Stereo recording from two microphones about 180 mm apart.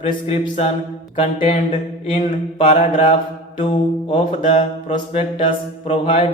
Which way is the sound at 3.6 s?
30° left (ahead or behind).